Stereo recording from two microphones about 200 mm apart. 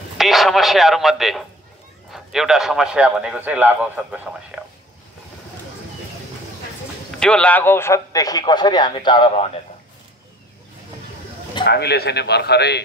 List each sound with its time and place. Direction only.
0.2 s a man's voice: centre (ahead or behind)
7.2 s a man's voice: 5° left (ahead or behind); by 9.5 s 25° left (ahead or behind)
11.6 s a man's voice: 55° left (ahead or behind)